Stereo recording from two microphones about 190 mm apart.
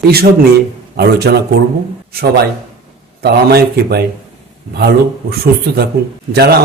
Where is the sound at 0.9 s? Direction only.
60° right (ahead or behind).